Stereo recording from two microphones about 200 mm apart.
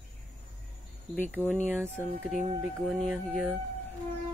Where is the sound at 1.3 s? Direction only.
10° right (ahead or behind).